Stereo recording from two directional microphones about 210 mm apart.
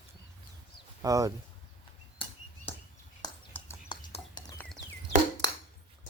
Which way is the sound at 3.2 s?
20° left (ahead or behind).